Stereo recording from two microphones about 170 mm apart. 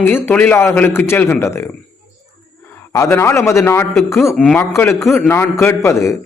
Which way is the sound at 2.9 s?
15° left (ahead or behind).